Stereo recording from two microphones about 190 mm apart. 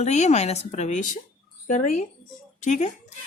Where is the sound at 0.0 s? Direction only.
35° left (ahead or behind).